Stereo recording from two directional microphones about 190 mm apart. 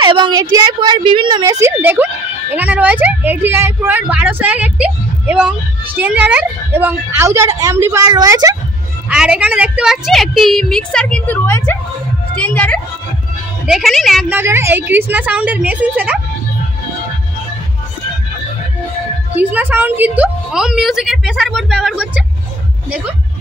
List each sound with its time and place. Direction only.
0.0 s a woman's voice: 25° right (ahead or behind)
9.1 s a woman's voice: 5° right (ahead or behind)
14.3 s a woman's voice: 15° right (ahead or behind)
19.3 s a woman's voice: 10° right (ahead or behind)